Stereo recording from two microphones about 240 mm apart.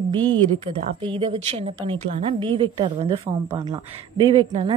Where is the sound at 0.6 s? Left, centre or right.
Right.